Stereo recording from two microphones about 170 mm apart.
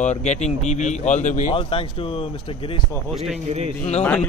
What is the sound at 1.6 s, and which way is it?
Speech, 35° left (ahead or behind).